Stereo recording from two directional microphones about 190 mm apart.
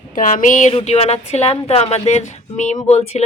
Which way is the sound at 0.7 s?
30° left (ahead or behind).